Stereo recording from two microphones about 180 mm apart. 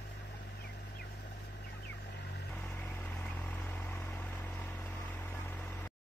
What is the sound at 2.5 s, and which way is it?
Vehicle, 10° left (ahead or behind).